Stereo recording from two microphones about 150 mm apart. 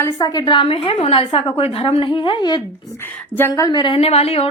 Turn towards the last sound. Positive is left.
turn(degrees=40)  # may be behind; listen again after turning